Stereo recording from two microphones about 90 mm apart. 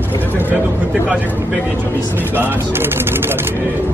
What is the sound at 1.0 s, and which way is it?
Speech, 15° right (ahead or behind).